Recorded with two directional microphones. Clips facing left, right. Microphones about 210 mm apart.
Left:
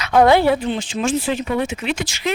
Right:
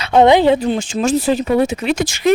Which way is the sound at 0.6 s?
45° right (ahead or behind).